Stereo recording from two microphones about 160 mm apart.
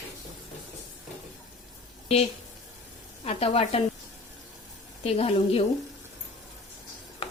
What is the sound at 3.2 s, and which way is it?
Speech, 40° left (ahead or behind).